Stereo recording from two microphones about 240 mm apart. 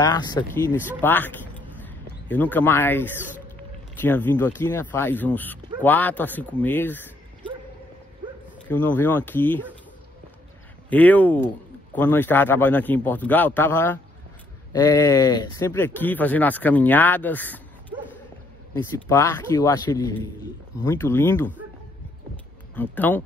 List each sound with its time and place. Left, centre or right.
0.0 s speech: centre
8.6 s speech: centre
10.9 s speech: centre
19.0 s speech: centre
22.8 s speech: centre